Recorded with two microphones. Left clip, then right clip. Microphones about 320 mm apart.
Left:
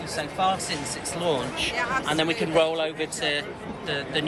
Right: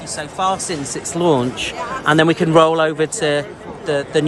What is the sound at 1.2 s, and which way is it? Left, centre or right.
Speech, right.